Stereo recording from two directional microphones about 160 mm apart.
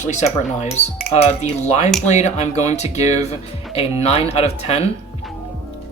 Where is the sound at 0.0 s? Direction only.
45° left (ahead or behind).